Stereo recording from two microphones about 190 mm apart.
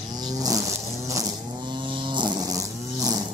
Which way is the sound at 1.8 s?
25° right (ahead or behind).